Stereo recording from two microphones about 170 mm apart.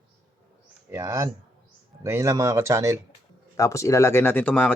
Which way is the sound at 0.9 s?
15° right (ahead or behind).